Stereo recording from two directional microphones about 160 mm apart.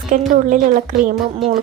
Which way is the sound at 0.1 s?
55° right (ahead or behind).